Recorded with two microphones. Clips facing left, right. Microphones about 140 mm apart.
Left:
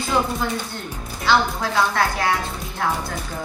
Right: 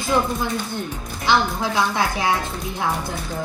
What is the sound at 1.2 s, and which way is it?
A woman's voice, 15° right (ahead or behind).